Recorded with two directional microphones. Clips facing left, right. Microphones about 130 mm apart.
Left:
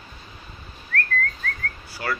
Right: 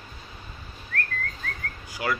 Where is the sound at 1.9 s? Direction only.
15° right (ahead or behind).